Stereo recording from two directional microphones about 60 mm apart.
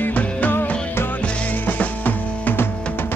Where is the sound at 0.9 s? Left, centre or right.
Left.